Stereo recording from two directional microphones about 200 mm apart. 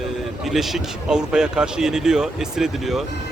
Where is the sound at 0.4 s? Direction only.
Centre (ahead or behind).